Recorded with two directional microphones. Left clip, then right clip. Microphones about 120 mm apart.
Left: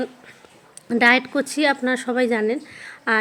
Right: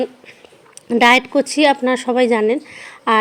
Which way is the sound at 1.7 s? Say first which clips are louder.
Right 5 dB; 35° right (ahead or behind).